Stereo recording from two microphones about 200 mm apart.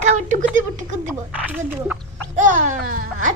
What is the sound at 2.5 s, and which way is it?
Speech, 40° right (ahead or behind).